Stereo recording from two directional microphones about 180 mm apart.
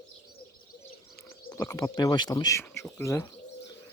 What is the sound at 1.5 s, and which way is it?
Speech, 15° left (ahead or behind).